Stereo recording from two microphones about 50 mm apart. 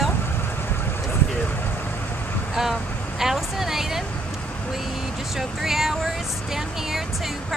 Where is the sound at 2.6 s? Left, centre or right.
Centre.